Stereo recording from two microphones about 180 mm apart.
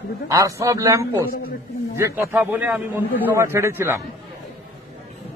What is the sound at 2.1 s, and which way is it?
A man's voice, 10° right (ahead or behind).